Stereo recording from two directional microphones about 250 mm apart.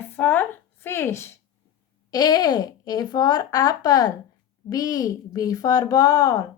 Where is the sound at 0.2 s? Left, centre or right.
Centre.